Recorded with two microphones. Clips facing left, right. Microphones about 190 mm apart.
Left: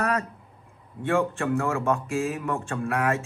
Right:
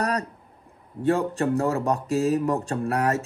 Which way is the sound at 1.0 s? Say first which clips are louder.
Right 2 dB; 35° right (ahead or behind).